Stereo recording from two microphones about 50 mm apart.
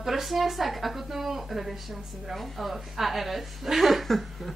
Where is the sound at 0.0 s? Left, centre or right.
Centre.